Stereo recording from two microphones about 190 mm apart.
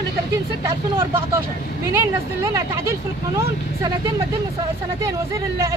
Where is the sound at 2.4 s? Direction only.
15° right (ahead or behind).